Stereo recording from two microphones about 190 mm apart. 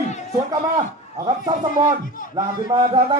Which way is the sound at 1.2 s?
20° right (ahead or behind).